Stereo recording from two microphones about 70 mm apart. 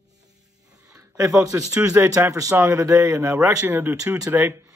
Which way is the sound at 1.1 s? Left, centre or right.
Right.